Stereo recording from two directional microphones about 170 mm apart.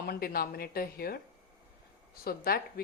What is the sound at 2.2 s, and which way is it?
Speech, 65° left (ahead or behind).